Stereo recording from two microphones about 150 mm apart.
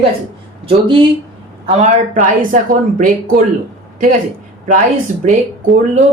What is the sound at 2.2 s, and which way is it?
A woman's voice, 60° right (ahead or behind).